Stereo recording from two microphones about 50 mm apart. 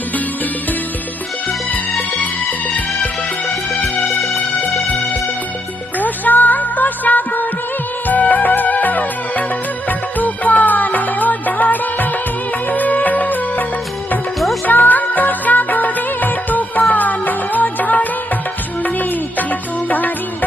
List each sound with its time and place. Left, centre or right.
6.0 s music: left
14.3 s music: centre
14.7 s music of bollywood: left
16.9 s music: left